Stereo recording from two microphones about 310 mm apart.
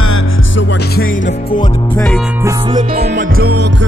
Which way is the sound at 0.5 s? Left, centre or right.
Left.